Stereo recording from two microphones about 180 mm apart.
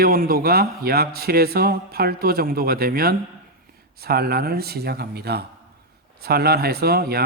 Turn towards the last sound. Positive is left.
turn(degrees=-60)  # may be behind; listen again after turning